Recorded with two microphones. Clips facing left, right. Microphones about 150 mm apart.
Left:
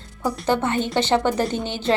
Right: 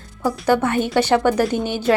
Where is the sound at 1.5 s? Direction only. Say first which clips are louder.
Right 5 dB; 10° right (ahead or behind).